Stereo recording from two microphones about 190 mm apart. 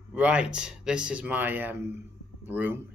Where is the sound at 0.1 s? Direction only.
5° right (ahead or behind).